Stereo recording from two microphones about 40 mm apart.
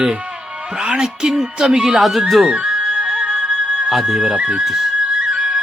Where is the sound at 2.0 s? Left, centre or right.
Centre.